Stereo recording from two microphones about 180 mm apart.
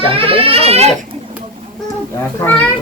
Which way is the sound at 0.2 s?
30° right (ahead or behind).